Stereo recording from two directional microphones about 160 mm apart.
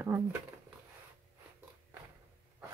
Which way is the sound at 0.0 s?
10° right (ahead or behind).